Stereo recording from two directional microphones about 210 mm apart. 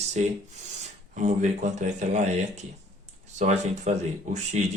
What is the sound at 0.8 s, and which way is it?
Speech, 35° right (ahead or behind).